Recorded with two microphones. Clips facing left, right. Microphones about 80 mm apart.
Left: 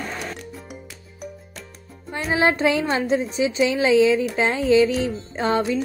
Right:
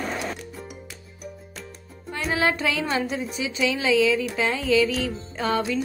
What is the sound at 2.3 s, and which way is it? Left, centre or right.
Speech, left.